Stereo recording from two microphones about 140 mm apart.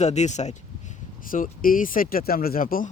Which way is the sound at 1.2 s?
80° left.